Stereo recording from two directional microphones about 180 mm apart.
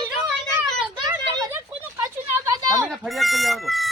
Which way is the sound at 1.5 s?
15° right (ahead or behind).